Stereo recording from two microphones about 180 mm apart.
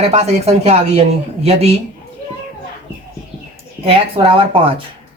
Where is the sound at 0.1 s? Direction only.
35° right (ahead or behind).